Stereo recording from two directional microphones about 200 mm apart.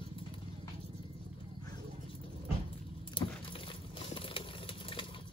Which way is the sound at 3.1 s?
25° left (ahead or behind).